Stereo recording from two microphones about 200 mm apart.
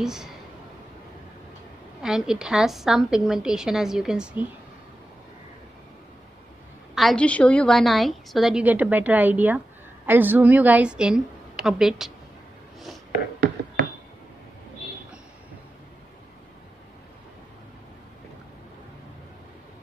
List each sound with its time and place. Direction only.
0.0 s a woman's voice: centre (ahead or behind)
2.0 s a woman's voice: 5° right (ahead or behind)
7.0 s a woman's voice: centre (ahead or behind)